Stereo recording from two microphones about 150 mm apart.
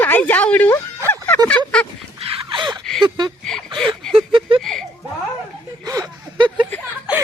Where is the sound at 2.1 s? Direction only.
35° right (ahead or behind).